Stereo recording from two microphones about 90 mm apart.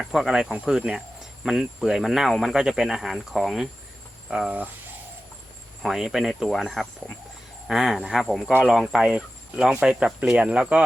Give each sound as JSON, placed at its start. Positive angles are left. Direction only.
{"t": 0.0, "sound": "speech", "side_deg": -5}
{"t": 5.8, "sound": "speech", "side_deg": -5}